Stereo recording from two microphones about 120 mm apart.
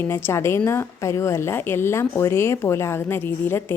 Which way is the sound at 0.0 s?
20° left (ahead or behind).